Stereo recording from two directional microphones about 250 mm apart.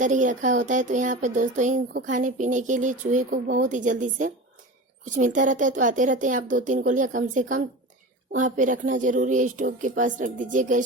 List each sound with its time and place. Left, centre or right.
0.0 s child singing: right
2.0 s speech: right